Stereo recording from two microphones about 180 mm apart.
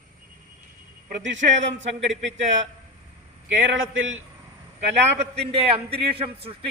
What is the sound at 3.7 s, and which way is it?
Speech, 90° right.